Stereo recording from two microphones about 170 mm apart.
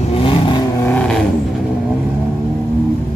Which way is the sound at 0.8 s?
10° left (ahead or behind).